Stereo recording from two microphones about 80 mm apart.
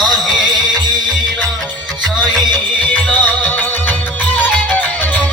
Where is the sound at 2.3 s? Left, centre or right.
Centre.